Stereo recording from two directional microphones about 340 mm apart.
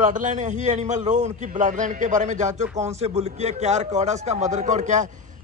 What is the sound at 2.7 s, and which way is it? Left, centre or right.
A man's voice, centre.